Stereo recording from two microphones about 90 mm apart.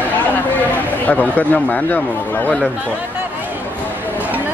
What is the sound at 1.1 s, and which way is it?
Speech, 15° left (ahead or behind).